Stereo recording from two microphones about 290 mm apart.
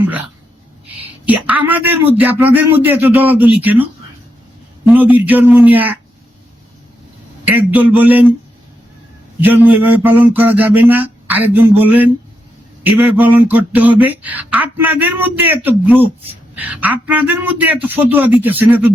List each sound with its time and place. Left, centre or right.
1.3 s speech: centre
4.9 s speech: centre
7.4 s speech: centre
9.4 s speech: centre